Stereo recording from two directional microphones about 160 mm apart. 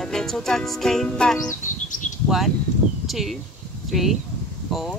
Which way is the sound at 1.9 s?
50° left (ahead or behind).